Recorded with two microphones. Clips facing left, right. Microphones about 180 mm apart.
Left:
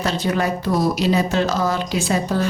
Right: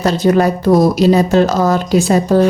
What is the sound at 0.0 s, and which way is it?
Speech, 45° right (ahead or behind).